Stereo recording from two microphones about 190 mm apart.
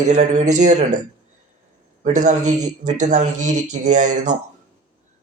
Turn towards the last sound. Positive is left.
turn(degrees=-40)  # may be behind; listen again after turning